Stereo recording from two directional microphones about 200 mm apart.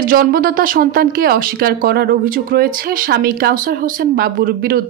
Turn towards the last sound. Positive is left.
turn(degrees=-50)  # may be behind; listen again after turning